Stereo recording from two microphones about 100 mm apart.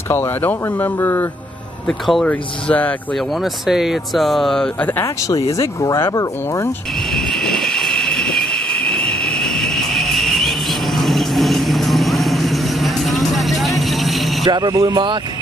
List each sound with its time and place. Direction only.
0.1 s speech: 20° left (ahead or behind)
1.9 s speech: centre (ahead or behind)
2.2 s speech: 15° left (ahead or behind)
3.6 s speech: 5° right (ahead or behind); by 5.0 s 15° left (ahead or behind)
5.0 s speech: 35° left (ahead or behind)
7.2 s train: 5° left (ahead or behind)
11.0 s vehicle: centre (ahead or behind)
14.4 s speech: 45° right (ahead or behind)